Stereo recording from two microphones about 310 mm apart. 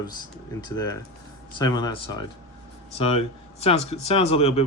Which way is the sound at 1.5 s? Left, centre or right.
Centre.